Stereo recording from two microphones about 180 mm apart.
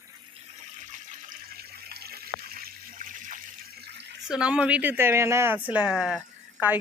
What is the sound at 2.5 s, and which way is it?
Water, 50° right (ahead or behind).